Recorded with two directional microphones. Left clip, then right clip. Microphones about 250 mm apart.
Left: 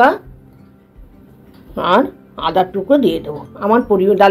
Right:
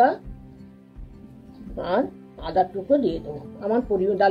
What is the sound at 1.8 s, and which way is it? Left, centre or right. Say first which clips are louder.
Speech: left 11 dB; left.